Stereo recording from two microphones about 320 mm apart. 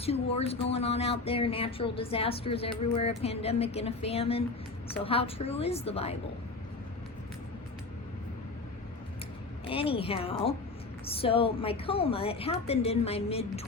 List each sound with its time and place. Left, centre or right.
0.0 s a woman's voice: centre
9.6 s speech: centre